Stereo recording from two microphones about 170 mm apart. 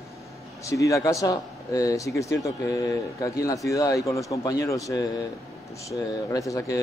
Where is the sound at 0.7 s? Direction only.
20° left (ahead or behind).